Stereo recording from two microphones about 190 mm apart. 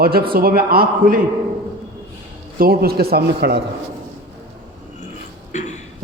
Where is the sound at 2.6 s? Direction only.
55° right (ahead or behind).